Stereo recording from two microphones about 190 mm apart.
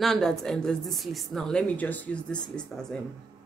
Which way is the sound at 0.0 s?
5° left (ahead or behind).